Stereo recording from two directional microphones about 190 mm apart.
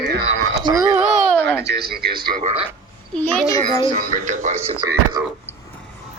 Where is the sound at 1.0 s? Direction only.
40° right (ahead or behind).